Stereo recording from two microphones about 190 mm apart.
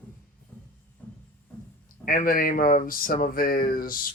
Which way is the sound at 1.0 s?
10° left (ahead or behind).